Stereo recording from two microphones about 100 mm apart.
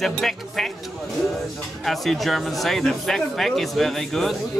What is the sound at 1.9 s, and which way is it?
Speech, centre (ahead or behind).